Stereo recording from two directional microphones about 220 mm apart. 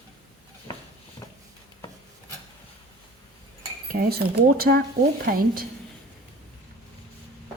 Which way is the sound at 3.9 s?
45° right (ahead or behind).